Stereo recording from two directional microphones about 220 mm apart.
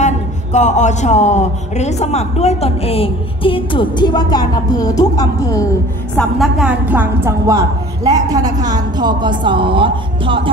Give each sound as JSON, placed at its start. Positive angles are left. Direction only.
{"t": 0.0, "sound": "speech", "side_deg": 30}
{"t": 6.1, "sound": "a woman's voice", "side_deg": 0}